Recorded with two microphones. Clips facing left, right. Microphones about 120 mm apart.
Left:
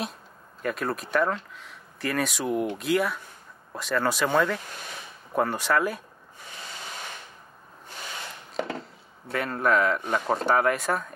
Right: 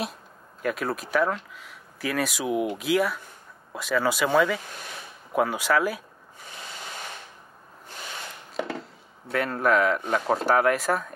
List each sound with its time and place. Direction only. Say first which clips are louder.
0.6 s speech: right 1 dB; centre (ahead or behind)
8.5 s a sound: even; centre (ahead or behind)
9.3 s speech: right 1 dB; centre (ahead or behind)